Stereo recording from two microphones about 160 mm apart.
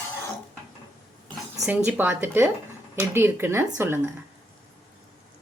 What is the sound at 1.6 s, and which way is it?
Speech, 10° right (ahead or behind).